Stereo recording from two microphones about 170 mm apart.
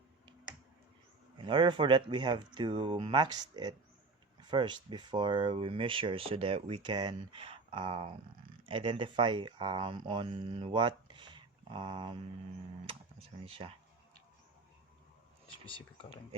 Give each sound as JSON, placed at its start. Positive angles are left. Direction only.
{"t": 1.4, "sound": "speech", "side_deg": -30}
{"t": 13.4, "sound": "speech", "side_deg": -35}
{"t": 15.6, "sound": "speech", "side_deg": 30}